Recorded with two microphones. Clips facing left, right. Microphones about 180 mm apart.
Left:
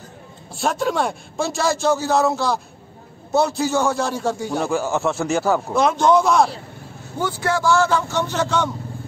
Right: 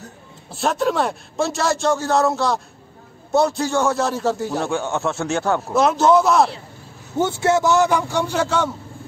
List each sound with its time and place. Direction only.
0.5 s a man's voice: centre (ahead or behind)
7.2 s a man's voice: 25° right (ahead or behind); by 8.6 s 10° right (ahead or behind)